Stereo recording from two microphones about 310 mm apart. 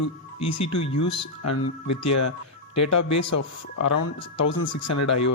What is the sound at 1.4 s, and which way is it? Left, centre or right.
Speech, left.